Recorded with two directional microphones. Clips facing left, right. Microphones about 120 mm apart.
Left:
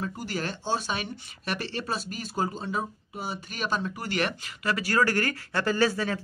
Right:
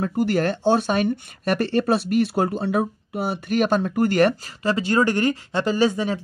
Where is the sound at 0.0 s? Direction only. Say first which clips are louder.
Right 11 dB; 60° right (ahead or behind); by 4.4 s 45° right (ahead or behind).